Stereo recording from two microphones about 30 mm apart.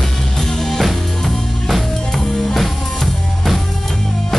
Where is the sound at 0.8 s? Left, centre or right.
Centre.